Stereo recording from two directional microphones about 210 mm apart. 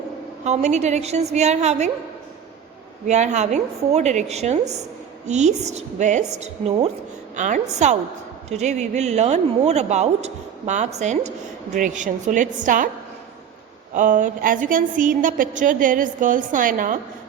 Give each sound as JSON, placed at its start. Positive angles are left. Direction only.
{"t": 0.4, "sound": "speech", "side_deg": -35}
{"t": 3.1, "sound": "speech", "side_deg": -35}
{"t": 13.9, "sound": "speech", "side_deg": -40}